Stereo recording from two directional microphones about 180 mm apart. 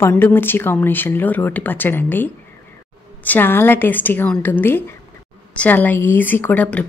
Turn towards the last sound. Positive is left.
turn(degrees=10)  # may be behind; listen again after turning